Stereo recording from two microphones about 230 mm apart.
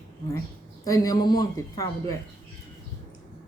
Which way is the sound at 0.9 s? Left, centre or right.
Centre.